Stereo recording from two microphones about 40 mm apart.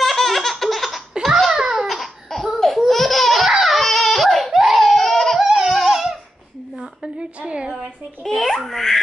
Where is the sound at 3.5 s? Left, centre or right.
Centre.